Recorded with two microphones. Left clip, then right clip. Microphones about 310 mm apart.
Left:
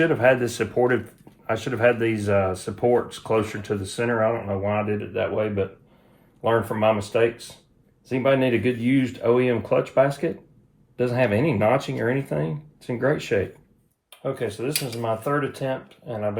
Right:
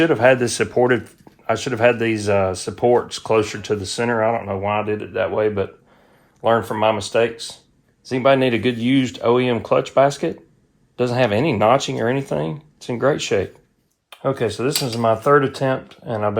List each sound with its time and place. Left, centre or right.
0.0 s speech: right